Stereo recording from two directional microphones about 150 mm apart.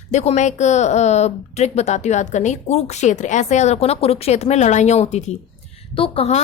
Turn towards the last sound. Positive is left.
turn(degrees=40)  # may be behind; listen again after turning